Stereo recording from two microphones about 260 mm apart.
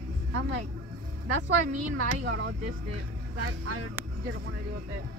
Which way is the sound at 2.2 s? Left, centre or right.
Right.